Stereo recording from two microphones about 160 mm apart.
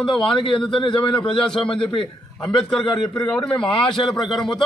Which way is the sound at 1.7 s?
35° left (ahead or behind).